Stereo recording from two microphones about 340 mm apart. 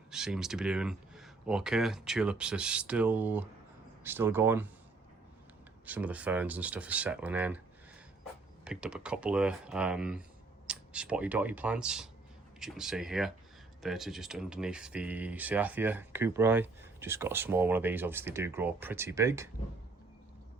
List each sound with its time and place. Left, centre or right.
0.1 s speech: centre
5.8 s speech: centre
8.6 s speech: centre